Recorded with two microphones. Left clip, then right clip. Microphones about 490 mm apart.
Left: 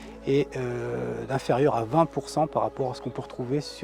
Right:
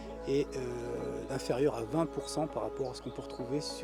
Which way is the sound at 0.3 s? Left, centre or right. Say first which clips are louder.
Left 7 dB; left.